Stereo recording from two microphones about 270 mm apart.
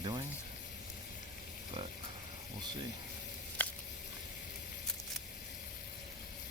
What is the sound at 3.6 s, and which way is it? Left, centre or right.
Squish, centre.